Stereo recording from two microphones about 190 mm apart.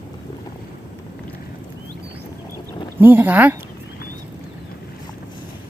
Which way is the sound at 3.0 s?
10° right (ahead or behind).